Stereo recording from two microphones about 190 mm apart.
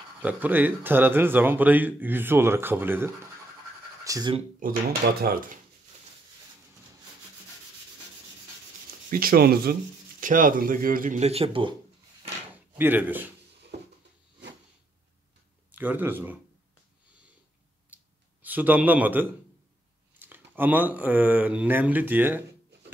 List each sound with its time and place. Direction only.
0.2 s speech: 10° right (ahead or behind)
4.6 s speech: 45° right (ahead or behind)
9.1 s speech: 50° right (ahead or behind); by 11.7 s 30° right (ahead or behind)
12.7 s speech: 10° right (ahead or behind)
15.7 s speech: 10° right (ahead or behind)
18.4 s a man's voice: 10° right (ahead or behind)